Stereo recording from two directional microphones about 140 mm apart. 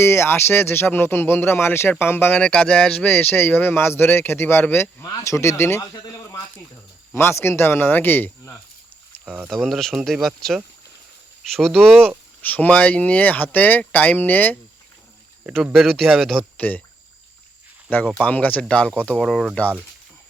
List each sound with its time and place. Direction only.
0.0 s speech: 15° left (ahead or behind)
5.9 s a sound: 25° left (ahead or behind)
7.1 s speech: 20° left (ahead or behind)
9.2 s speech: 10° right (ahead or behind)
9.5 s speech: 5° left (ahead or behind)
15.4 s speech: 5° right (ahead or behind)
16.6 s speech: 10° left (ahead or behind)
18.2 s speech: 10° left (ahead or behind)